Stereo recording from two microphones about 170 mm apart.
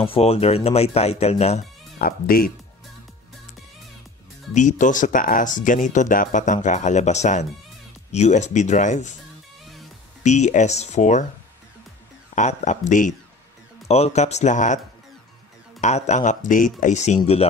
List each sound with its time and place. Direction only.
0.0 s a man's voice: 35° left (ahead or behind)
2.0 s speech: 60° left (ahead or behind)
4.6 s speech: 50° left (ahead or behind)
10.2 s speech: 45° left (ahead or behind)
12.4 s a man's voice: 45° left (ahead or behind)
15.8 s speech: 45° left (ahead or behind)